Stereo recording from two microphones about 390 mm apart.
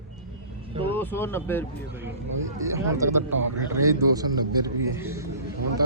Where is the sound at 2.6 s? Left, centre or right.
Centre.